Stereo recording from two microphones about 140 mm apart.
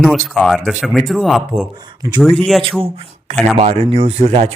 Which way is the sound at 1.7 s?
30° right (ahead or behind).